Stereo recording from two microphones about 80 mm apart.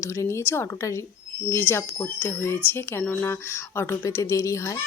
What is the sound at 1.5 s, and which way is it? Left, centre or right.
Speech, left.